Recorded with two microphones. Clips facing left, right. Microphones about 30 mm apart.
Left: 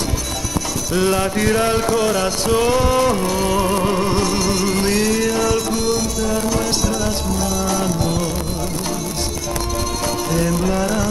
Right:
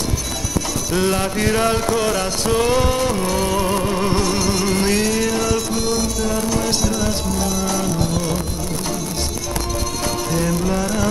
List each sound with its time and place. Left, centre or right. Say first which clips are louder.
0.9 s mantra: left 2 dB; centre
2.7 s mantra: left 2 dB; centre
4.0 s music: left 1 dB; centre
10.3 s music: left 1 dB; centre